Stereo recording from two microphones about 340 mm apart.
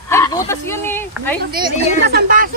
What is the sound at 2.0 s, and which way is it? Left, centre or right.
Speech, right.